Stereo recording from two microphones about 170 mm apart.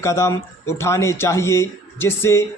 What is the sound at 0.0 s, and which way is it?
Speech, 15° left (ahead or behind).